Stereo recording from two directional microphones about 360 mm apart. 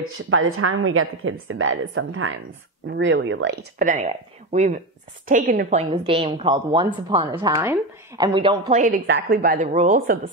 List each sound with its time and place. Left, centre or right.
0.0 s a woman's voice: right